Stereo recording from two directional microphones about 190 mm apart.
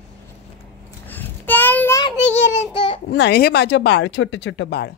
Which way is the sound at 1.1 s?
10° left (ahead or behind).